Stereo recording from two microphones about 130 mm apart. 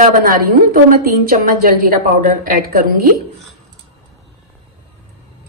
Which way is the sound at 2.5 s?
90° right.